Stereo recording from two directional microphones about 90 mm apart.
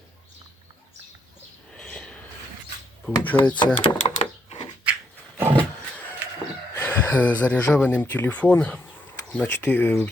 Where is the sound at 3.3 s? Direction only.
10° left (ahead or behind).